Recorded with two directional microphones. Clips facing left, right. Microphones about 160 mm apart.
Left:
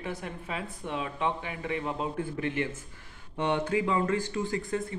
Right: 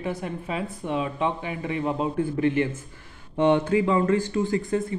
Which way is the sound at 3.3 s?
30° right (ahead or behind).